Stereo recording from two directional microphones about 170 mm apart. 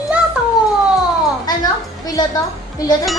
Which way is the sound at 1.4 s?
25° left (ahead or behind).